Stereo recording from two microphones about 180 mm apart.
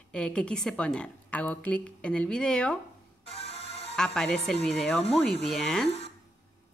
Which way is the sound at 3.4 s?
35° left (ahead or behind).